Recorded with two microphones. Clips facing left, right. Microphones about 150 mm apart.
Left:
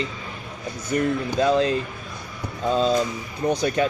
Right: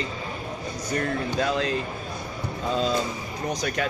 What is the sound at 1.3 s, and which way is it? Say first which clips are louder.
Speech: left 7 dB; 30° left (ahead or behind).